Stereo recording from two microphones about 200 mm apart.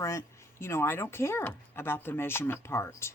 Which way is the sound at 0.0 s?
15° left (ahead or behind).